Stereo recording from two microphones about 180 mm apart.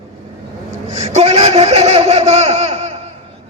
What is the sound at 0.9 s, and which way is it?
Laughter, 35° right (ahead or behind).